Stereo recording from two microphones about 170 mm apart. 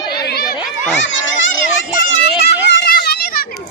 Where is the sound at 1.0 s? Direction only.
90° left.